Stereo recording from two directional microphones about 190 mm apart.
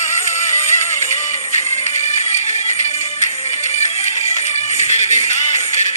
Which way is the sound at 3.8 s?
35° left (ahead or behind).